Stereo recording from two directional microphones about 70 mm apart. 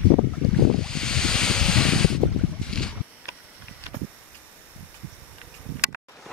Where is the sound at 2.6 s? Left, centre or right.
Centre.